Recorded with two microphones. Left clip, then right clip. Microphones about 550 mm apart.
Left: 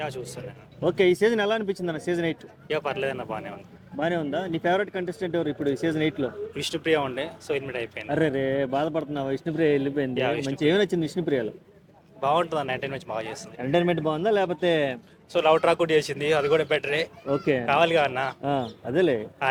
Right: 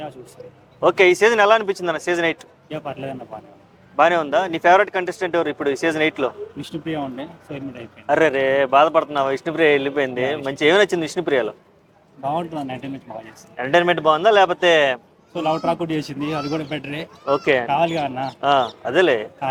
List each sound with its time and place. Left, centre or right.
0.9 s speech: right
2.6 s speech: left
3.9 s speech: right
6.6 s speech: left
8.1 s speech: right
12.2 s speech: left
13.6 s speech: centre
15.3 s speech: left
17.4 s speech: right
17.7 s speech: left
18.4 s speech: right